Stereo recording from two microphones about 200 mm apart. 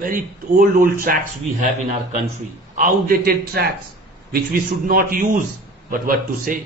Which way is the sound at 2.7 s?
45° right (ahead or behind).